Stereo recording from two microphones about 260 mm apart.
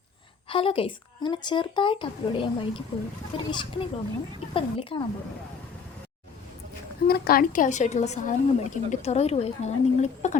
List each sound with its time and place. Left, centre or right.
0.4 s a woman's voice: centre
7.1 s a woman's voice: left